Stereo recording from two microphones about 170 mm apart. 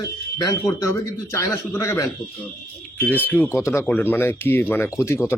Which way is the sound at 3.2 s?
10° left (ahead or behind).